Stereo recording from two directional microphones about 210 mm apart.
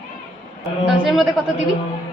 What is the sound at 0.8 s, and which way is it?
Speech, 5° right (ahead or behind).